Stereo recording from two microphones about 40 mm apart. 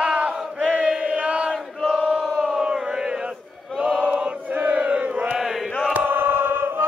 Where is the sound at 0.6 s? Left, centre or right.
Right.